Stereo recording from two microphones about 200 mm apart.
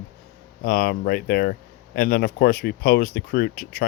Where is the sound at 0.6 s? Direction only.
45° left (ahead or behind).